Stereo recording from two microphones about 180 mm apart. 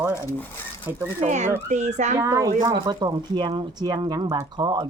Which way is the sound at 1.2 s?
40° right (ahead or behind).